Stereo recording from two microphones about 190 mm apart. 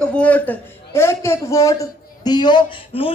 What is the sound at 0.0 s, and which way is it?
A woman's voice, 5° left (ahead or behind).